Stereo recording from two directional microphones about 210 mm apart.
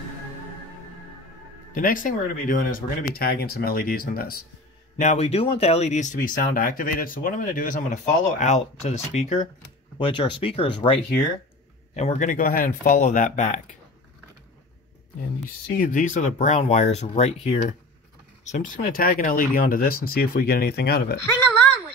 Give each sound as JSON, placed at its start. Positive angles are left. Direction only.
{"t": 1.7, "sound": "speech", "side_deg": 40}
{"t": 4.9, "sound": "speech", "side_deg": 35}
{"t": 15.8, "sound": "speech", "side_deg": 40}